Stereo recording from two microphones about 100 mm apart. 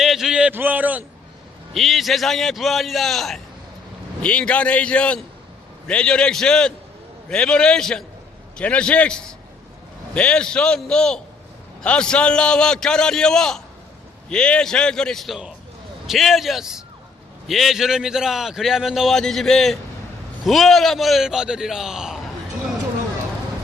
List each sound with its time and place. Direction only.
0.0 s a sound: 5° right (ahead or behind)
0.5 s a man's voice: 15° right (ahead or behind)
1.7 s a man's voice: centre (ahead or behind)